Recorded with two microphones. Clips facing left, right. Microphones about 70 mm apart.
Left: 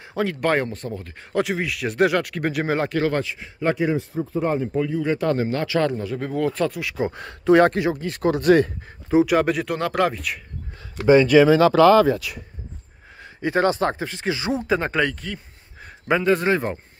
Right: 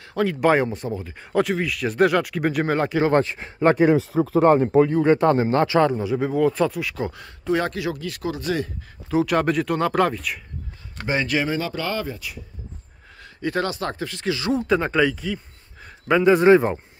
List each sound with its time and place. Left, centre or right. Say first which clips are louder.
0.1 s speech: right 3 dB; centre
1.4 s speech: right 1 dB; centre
3.1 s speech: right 5 dB; right
3.9 s speech: right 6 dB; right
5.2 s speech: right 4 dB; right
5.8 s speech: right 3 dB; centre
7.2 s speech: left 10 dB; left
7.8 s speech: left 4 dB; left
8.3 s speech: left 9 dB; left
9.2 s speech: right 1 dB; centre
11.5 s speech: left 12 dB; left
13.2 s a sound: left 3 dB; left
13.7 s speech: left 6 dB; left
14.6 s speech: right 3 dB; centre